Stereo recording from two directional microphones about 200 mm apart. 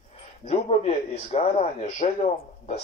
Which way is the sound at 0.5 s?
30° left (ahead or behind).